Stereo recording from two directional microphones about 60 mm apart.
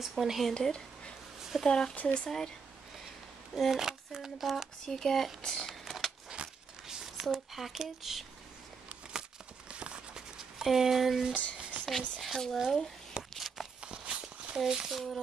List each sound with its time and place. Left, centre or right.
0.0 s speech: centre
0.5 s speech: centre
3.5 s speech: centre
4.8 s speech: centre
6.3 s a sound: centre
7.2 s speech: centre
9.7 s clip-clop: centre
10.6 s speech: centre
11.7 s a sound: right
12.2 s speech: centre
13.3 s a sound: centre
13.7 s walk: centre
14.6 s speech: centre